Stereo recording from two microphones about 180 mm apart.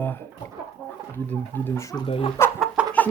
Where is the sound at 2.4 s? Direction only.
15° left (ahead or behind).